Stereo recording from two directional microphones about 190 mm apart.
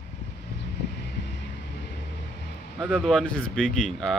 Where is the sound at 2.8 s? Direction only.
5° left (ahead or behind).